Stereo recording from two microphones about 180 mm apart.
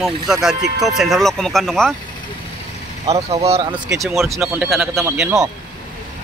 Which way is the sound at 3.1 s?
35° right (ahead or behind).